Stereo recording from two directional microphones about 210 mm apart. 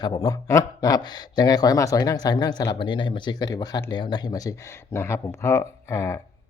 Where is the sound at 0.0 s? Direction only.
20° left (ahead or behind).